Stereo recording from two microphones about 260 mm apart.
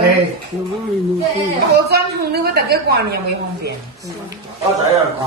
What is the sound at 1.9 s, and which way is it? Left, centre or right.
A woman's voice, right.